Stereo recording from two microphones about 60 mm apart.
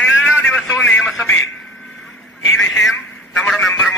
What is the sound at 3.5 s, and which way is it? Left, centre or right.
Speech, centre.